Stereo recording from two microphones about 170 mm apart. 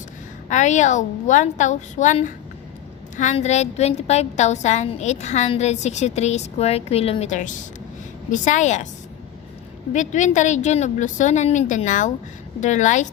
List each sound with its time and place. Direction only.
0.4 s a woman's voice: 45° left (ahead or behind)
9.9 s a woman's voice: 45° left (ahead or behind)